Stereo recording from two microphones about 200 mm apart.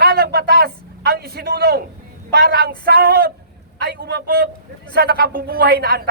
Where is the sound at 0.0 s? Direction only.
50° right (ahead or behind).